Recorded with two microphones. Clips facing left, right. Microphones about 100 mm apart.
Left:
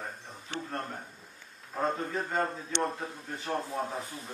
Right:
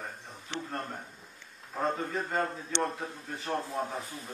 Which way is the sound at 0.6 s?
Centre (ahead or behind).